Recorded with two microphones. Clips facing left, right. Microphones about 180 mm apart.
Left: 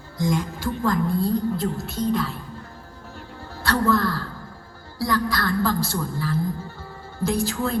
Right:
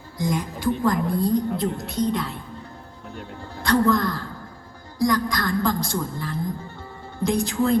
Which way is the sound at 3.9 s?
15° right (ahead or behind).